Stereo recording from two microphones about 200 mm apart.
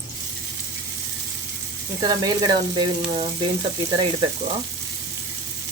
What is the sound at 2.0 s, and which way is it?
Sizzle, 20° right (ahead or behind).